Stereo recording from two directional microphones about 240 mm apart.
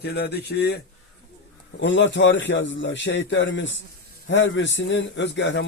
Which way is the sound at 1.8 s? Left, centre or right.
Left.